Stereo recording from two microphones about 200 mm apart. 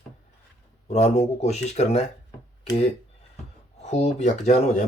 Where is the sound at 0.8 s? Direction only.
35° left (ahead or behind).